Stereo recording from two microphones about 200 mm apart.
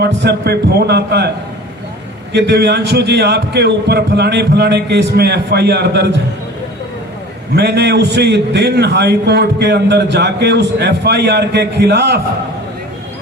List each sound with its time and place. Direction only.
0.0 s a man's voice: 55° right (ahead or behind)
2.3 s a man's voice: 55° right (ahead or behind)
7.5 s a man's voice: 55° right (ahead or behind)